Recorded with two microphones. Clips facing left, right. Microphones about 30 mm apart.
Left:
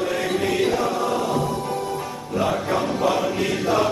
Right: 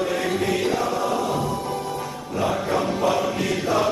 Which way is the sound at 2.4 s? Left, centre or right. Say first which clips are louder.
Even; centre.